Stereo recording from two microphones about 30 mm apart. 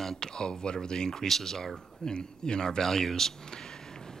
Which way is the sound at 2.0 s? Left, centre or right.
Left.